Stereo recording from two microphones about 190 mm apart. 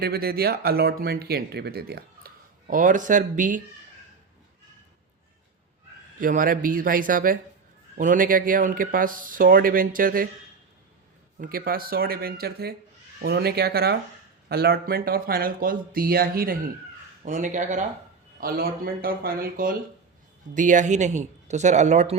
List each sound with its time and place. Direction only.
0.0 s speech: 55° right (ahead or behind)
6.1 s speech: 45° right (ahead or behind)
11.3 s speech: 50° right (ahead or behind)
17.2 s speech: 40° right (ahead or behind)